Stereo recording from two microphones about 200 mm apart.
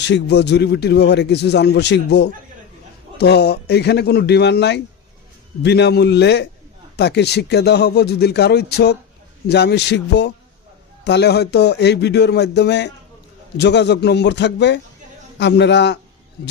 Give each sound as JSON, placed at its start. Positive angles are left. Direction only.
{"t": 0.0, "sound": "speech", "side_deg": 60}